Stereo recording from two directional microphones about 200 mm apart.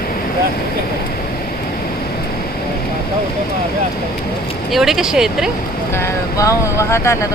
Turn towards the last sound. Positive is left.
turn(degrees=15)  # may be behind; listen again after turning